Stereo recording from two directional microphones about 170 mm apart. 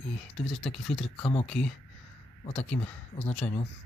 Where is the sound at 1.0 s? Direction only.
35° left (ahead or behind).